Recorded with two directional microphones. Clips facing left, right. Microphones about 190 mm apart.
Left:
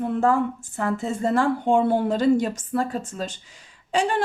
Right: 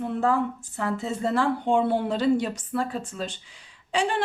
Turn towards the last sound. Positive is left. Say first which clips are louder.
# left 3 dB
turn(degrees=45)  # may be behind; listen again after turning